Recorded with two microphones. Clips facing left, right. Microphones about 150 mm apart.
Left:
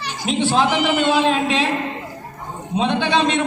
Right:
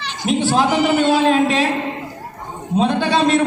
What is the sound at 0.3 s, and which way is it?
Speech, 45° right (ahead or behind).